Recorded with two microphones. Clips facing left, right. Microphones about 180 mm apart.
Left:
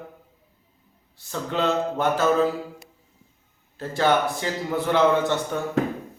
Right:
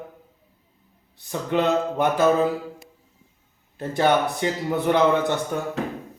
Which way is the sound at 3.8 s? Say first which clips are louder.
Right 1 dB; 15° right (ahead or behind).